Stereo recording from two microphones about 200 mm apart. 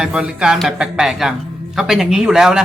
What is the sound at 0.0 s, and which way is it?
A man's voice, 5° right (ahead or behind).